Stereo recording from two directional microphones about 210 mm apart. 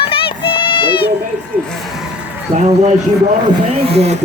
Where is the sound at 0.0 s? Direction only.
25° left (ahead or behind).